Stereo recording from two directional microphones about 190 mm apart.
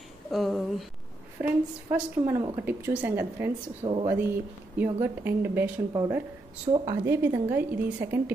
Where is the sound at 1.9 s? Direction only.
10° right (ahead or behind).